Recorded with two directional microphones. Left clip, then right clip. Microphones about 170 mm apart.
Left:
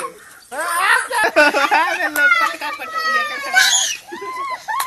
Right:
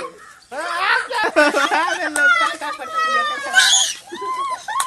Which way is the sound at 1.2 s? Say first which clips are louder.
Left 1 dB; 55° right (ahead or behind).